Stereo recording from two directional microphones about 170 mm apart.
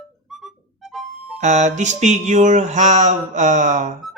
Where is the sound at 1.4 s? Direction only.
45° right (ahead or behind).